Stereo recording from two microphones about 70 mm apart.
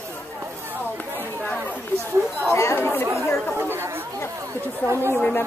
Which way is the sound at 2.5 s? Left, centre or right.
Left.